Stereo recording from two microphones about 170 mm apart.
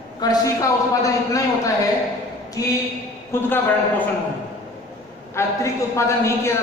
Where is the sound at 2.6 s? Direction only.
20° left (ahead or behind).